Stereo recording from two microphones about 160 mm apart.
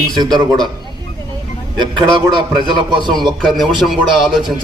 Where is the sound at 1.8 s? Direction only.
30° right (ahead or behind).